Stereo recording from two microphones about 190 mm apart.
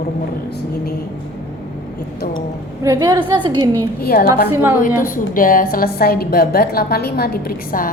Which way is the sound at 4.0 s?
55° left (ahead or behind).